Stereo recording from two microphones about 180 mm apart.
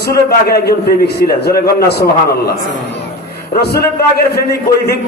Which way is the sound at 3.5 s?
65° left (ahead or behind).